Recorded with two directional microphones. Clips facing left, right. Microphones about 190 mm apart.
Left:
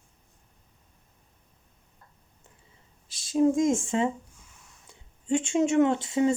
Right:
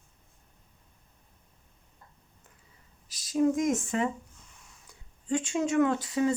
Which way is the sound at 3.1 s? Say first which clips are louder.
Left 3 dB; 25° left (ahead or behind).